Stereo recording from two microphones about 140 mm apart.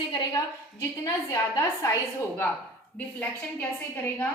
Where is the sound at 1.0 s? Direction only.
25° left (ahead or behind).